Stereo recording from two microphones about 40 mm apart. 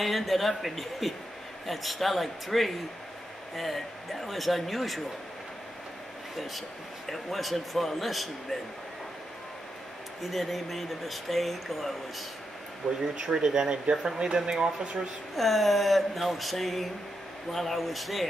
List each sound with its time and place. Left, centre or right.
0.0 s speech: centre
6.3 s speech: centre
10.2 s speech: centre
12.8 s speech: left
13.2 s speech: centre
15.3 s speech: centre